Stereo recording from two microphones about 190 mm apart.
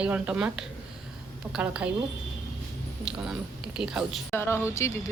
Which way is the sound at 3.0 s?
5° right (ahead or behind).